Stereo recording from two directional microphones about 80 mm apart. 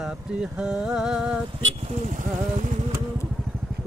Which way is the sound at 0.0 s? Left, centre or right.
Centre.